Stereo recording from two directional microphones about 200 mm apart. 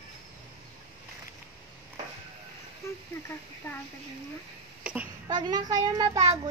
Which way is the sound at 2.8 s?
15° left (ahead or behind).